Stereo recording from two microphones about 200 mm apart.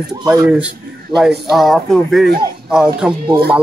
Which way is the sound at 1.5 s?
Centre (ahead or behind).